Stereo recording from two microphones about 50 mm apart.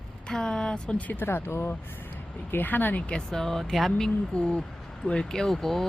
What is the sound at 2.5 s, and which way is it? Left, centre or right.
Speech, left.